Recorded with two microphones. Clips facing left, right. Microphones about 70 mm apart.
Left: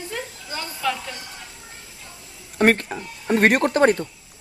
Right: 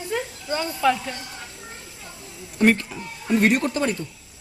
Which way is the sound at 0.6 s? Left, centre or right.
Centre.